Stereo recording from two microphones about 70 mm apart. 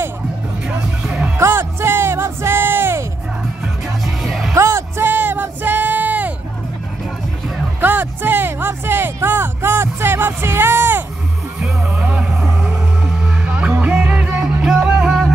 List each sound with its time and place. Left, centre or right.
1.4 s music: right
3.6 s music: centre
4.6 s music: right
7.8 s music: right
12.0 s music: centre